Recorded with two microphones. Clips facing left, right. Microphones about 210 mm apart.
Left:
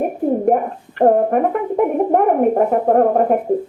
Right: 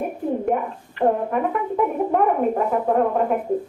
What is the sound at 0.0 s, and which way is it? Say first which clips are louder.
Speech: left 7 dB; 45° left (ahead or behind).